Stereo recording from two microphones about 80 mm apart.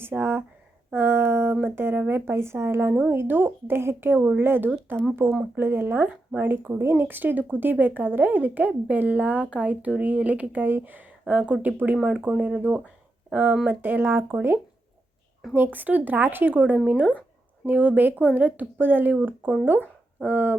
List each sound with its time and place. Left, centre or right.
0.0 s speech: right
0.9 s a sound: right
1.6 s speech: right
12.0 s speech: centre; by 14.3 s right
15.5 s speech: right